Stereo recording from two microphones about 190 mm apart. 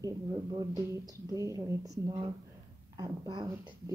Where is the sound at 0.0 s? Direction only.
20° right (ahead or behind).